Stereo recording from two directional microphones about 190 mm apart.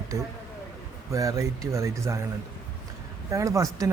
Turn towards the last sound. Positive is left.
turn(degrees=-15)  # may be behind; listen again after turning